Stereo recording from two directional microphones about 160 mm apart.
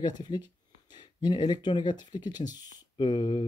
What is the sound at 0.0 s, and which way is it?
Speech, 25° left (ahead or behind).